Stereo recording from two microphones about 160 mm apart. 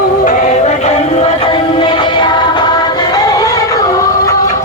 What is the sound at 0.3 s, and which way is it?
Music, 45° left (ahead or behind).